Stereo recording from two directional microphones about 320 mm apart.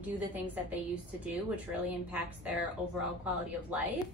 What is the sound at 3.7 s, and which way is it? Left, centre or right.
Speech, centre.